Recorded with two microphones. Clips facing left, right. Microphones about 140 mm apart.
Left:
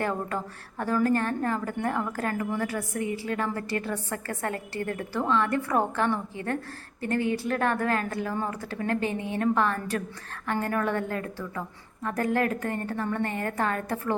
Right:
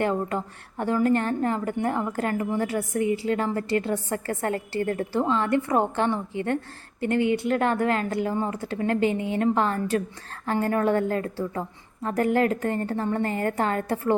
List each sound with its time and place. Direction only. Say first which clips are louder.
0.0 s a woman's voice: right 4 dB; 25° right (ahead or behind)
7.2 s speech: right 5 dB; 35° left (ahead or behind)
7.4 s a woman's voice: right 3 dB; 25° right (ahead or behind)